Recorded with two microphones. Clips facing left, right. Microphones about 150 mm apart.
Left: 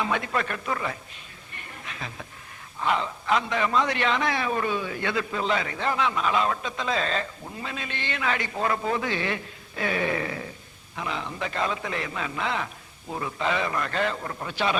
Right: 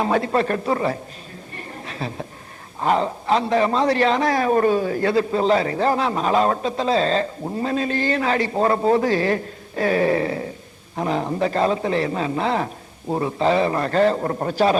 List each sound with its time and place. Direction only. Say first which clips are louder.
0.0 s a man's voice: right 8 dB; 35° right (ahead or behind)
1.5 s a sound: right 8 dB; 35° right (ahead or behind)
2.8 s a man's voice: right 6 dB; 40° right (ahead or behind)